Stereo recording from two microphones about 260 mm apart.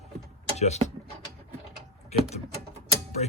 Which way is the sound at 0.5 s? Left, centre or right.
Left.